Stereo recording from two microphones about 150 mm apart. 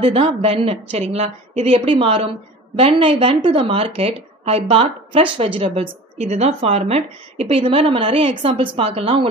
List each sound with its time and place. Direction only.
0.0 s a woman's voice: 40° right (ahead or behind)